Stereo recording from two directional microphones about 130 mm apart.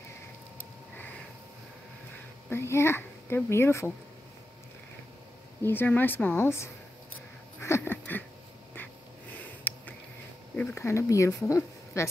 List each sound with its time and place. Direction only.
2.5 s speech: 20° left (ahead or behind)
5.6 s speech: 15° left (ahead or behind)
7.6 s a sound: 20° left (ahead or behind)
9.3 s sniff: 15° left (ahead or behind)
10.5 s speech: 15° left (ahead or behind)